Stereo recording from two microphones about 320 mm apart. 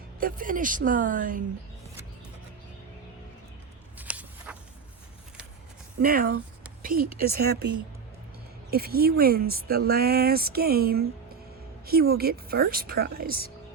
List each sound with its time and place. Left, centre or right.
0.2 s speech: right
3.9 s a sound: centre
6.0 s speech: right
8.7 s speech: right